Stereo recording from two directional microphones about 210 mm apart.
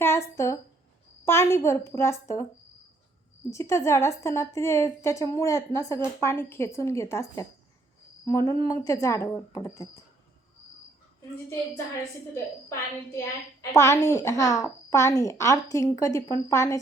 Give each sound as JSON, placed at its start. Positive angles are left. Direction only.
{"t": 0.0, "sound": "a woman's voice", "side_deg": 10}
{"t": 3.5, "sound": "a woman's voice", "side_deg": 15}
{"t": 12.3, "sound": "a woman's voice", "side_deg": 15}